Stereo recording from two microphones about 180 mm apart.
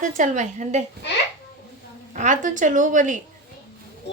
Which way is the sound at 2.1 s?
45° right (ahead or behind).